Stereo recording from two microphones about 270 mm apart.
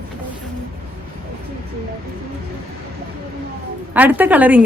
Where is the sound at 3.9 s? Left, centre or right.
Centre.